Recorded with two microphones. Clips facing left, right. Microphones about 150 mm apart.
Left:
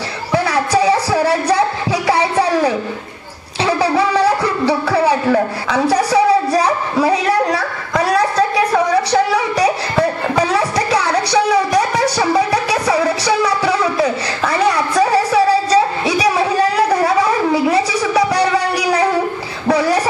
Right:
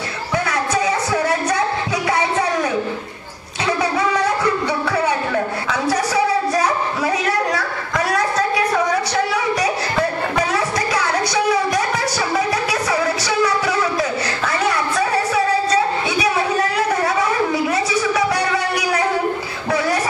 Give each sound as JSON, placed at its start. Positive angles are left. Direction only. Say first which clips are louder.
{"t": 0.3, "sound": "music", "louder": "left 5 dB", "side_deg": 30}
{"t": 5.7, "sound": "a sound", "louder": "left 6 dB", "side_deg": 30}
{"t": 11.0, "sound": "music", "louder": "left 4 dB", "side_deg": 30}